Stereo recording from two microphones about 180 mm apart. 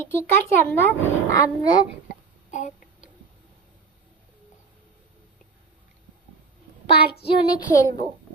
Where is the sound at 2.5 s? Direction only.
45° left (ahead or behind).